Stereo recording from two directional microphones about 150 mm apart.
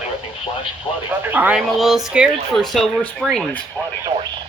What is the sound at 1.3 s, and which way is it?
Speech, 10° right (ahead or behind).